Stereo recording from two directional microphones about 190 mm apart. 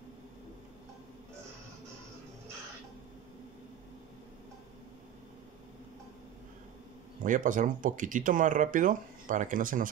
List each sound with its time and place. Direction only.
7.2 s speech: 45° right (ahead or behind)